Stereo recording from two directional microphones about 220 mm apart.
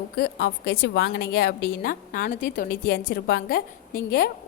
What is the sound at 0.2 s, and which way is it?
A woman's voice, 50° left (ahead or behind).